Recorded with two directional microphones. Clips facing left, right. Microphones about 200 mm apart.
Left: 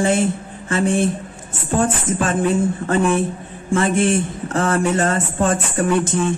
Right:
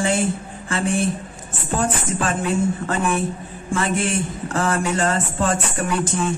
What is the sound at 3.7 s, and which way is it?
Speech, 25° left (ahead or behind).